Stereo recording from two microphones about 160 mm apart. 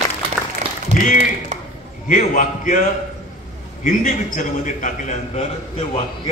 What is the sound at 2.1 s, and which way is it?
A man's voice, 55° left (ahead or behind).